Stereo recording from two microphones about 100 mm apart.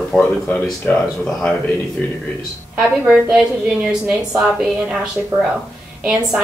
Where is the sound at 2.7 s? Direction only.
5° right (ahead or behind).